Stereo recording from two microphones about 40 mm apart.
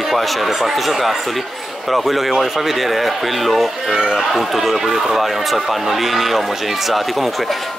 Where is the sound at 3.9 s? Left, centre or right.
Centre.